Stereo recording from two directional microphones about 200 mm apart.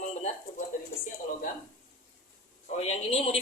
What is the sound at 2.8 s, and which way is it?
Speech, 30° left (ahead or behind).